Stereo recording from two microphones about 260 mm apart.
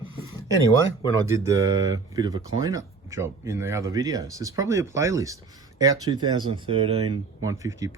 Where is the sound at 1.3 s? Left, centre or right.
Centre.